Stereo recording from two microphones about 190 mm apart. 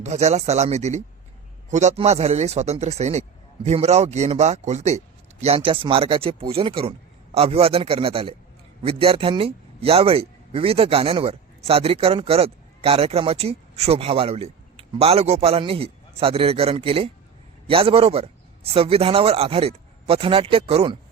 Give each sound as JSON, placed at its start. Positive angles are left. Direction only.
{"t": 0.0, "sound": "a man's voice", "side_deg": -35}